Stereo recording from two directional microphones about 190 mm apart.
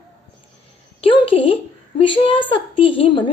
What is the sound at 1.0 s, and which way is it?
Speech, 30° left (ahead or behind).